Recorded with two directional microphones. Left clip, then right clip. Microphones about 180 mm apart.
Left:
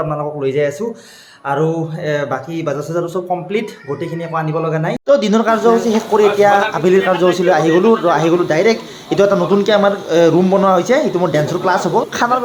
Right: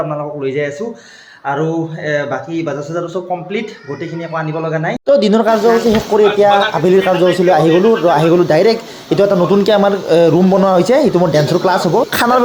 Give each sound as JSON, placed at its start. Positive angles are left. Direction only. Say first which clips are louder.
{"t": 0.1, "sound": "a man's voice", "louder": "left 1 dB", "side_deg": 5}
{"t": 4.4, "sound": "a man's voice", "louder": "even", "side_deg": 5}
{"t": 5.0, "sound": "speech", "louder": "right 2 dB", "side_deg": -15}
{"t": 9.6, "sound": "speech", "louder": "right 2 dB", "side_deg": -25}
{"t": 12.1, "sound": "speech", "louder": "right 3 dB", "side_deg": -35}